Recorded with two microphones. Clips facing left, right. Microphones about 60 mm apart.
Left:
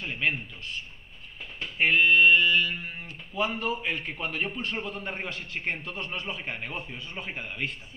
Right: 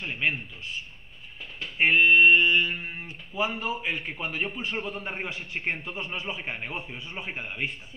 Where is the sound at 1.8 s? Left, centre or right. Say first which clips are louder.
Right 2 dB; centre.